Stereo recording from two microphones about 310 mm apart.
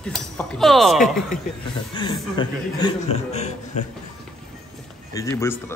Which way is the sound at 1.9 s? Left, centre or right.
Centre.